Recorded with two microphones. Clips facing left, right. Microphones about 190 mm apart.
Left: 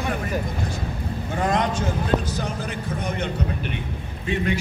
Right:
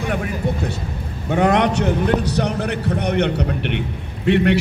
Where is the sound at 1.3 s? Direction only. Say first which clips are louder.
Right 7 dB; 70° right (ahead or behind).